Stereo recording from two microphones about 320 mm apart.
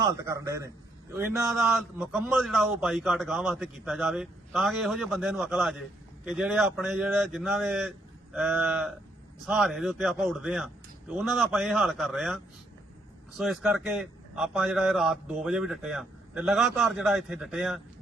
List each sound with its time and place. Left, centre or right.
0.0 s a man's voice: centre